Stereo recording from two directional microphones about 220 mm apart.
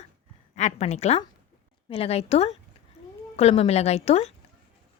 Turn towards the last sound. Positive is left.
turn(degrees=30)  # may be behind; listen again after turning